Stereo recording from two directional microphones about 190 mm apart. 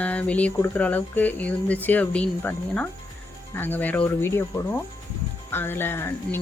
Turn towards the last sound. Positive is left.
turn(degrees=10)  # may be behind; listen again after turning